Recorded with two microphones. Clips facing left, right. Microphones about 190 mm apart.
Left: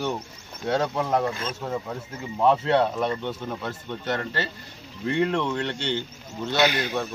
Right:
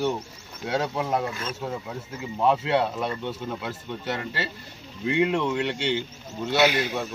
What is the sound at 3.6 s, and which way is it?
Speech, 10° right (ahead or behind).